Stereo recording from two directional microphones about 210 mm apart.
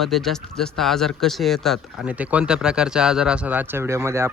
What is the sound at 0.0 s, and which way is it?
Speech, centre (ahead or behind).